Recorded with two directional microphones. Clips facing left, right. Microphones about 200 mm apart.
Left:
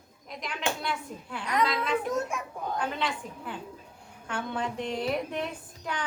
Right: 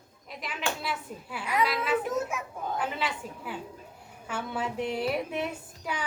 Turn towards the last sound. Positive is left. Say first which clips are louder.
# even
turn(degrees=-10)  # may be behind; listen again after turning